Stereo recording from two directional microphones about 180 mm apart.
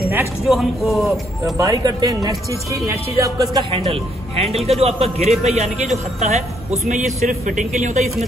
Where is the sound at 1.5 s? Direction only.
20° right (ahead or behind).